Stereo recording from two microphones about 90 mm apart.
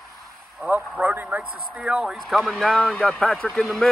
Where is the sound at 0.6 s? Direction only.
20° right (ahead or behind).